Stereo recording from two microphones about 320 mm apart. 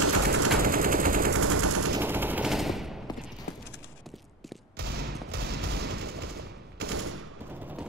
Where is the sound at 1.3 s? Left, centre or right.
Right.